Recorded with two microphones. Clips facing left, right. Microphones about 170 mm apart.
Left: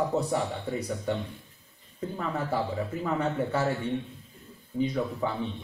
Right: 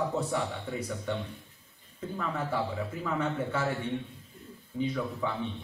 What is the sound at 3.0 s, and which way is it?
Speech, 35° left (ahead or behind).